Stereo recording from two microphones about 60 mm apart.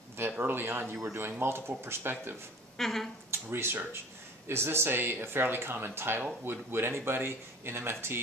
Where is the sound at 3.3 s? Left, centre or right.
Right.